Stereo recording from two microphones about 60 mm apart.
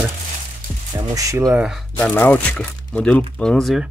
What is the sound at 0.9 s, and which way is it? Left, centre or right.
Speech, right.